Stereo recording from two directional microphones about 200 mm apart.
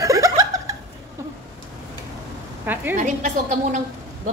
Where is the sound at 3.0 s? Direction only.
40° right (ahead or behind).